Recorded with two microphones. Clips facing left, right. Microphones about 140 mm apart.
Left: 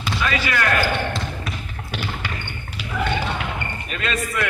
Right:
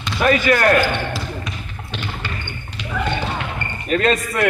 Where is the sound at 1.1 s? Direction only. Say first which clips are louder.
Right 1 dB; 5° left (ahead or behind).